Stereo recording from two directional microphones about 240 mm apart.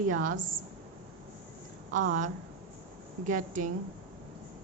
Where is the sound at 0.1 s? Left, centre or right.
Right.